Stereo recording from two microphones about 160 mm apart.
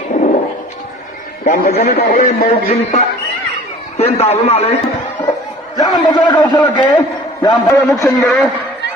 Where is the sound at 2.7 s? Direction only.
35° left (ahead or behind).